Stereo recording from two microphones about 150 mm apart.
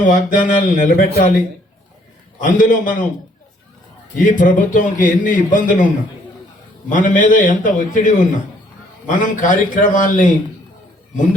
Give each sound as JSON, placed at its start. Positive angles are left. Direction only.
{"t": 0.0, "sound": "a man's voice", "side_deg": 60}
{"t": 2.4, "sound": "a man's voice", "side_deg": 60}
{"t": 4.2, "sound": "a man's voice", "side_deg": 60}
{"t": 6.9, "sound": "a man's voice", "side_deg": 60}